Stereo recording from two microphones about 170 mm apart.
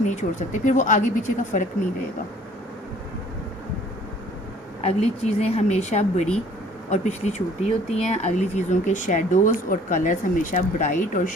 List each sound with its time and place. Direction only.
0.1 s speech: 45° left (ahead or behind)
4.8 s speech: 40° left (ahead or behind)